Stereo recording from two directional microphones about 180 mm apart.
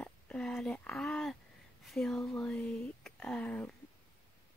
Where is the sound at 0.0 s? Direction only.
5° left (ahead or behind).